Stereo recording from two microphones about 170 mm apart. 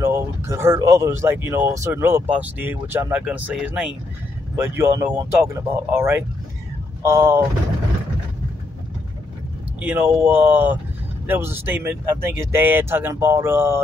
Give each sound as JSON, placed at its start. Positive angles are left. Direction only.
{"t": 0.0, "sound": "speech", "side_deg": -15}
{"t": 9.8, "sound": "speech", "side_deg": -10}